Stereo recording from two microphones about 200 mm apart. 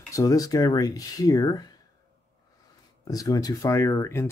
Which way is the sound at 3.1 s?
20° left (ahead or behind).